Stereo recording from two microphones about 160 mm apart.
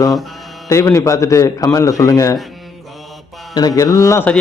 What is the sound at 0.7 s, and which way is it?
A man's voice, 20° left (ahead or behind).